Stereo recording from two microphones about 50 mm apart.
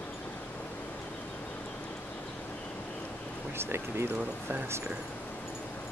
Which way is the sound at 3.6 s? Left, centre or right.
Right.